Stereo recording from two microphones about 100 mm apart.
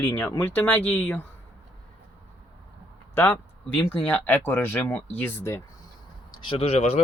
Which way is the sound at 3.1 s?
20° left (ahead or behind).